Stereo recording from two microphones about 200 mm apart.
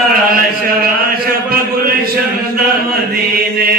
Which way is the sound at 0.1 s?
45° right (ahead or behind).